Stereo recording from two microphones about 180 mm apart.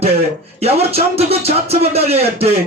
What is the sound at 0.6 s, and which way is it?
Speech, 35° right (ahead or behind).